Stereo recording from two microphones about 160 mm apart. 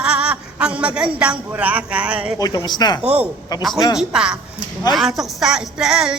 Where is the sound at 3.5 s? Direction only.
25° left (ahead or behind).